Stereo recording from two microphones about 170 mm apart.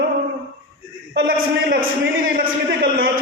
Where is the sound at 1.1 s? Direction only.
60° right (ahead or behind).